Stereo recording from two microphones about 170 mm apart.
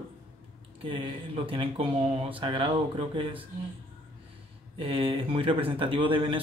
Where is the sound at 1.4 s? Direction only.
35° right (ahead or behind).